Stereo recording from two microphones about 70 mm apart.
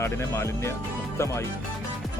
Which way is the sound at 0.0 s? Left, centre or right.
Left.